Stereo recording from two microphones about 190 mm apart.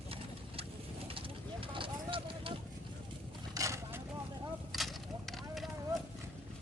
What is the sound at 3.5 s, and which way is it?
Vehicle, 15° right (ahead or behind).